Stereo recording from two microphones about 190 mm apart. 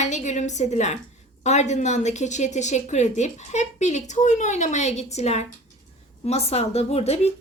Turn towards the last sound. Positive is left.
turn(degrees=35)  # may be behind; listen again after turning